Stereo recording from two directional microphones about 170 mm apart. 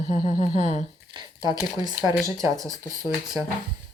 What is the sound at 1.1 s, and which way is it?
Squish, 30° right (ahead or behind).